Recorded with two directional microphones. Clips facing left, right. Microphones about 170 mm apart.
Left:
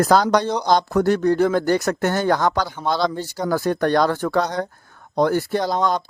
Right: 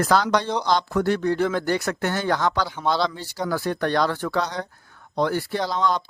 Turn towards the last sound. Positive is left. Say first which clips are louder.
# left 3 dB
turn(degrees=45)  # may be behind; listen again after turning